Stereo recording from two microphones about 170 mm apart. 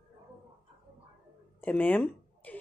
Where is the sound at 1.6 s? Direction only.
10° left (ahead or behind).